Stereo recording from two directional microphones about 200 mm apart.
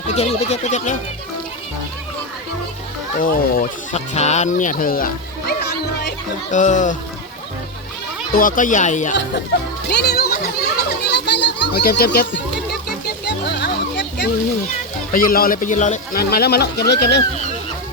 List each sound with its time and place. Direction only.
0.1 s speech: 30° left (ahead or behind)
3.2 s speech: 45° left (ahead or behind)
6.5 s speech: 40° left (ahead or behind)
8.3 s speech: 45° left (ahead or behind)
9.9 s music: 55° left (ahead or behind)
10.8 s children playing: 60° left (ahead or behind)
15.1 s speech: 45° left (ahead or behind)